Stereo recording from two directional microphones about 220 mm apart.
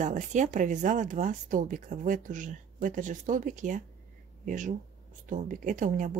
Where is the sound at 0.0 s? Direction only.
35° right (ahead or behind).